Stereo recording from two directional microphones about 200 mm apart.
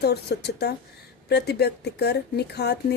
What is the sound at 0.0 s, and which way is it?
Speech, 55° left (ahead or behind).